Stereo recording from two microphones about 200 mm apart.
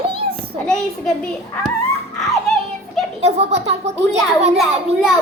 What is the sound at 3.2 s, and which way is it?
A child's voice, 35° right (ahead or behind).